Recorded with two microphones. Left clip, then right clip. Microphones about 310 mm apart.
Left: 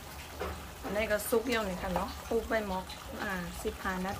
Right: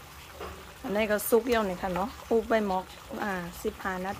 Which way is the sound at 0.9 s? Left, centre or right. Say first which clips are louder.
Right 5 dB; centre.